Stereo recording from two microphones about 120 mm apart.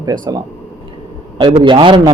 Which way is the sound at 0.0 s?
30° right (ahead or behind).